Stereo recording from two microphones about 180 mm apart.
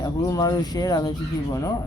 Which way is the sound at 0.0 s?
20° left (ahead or behind).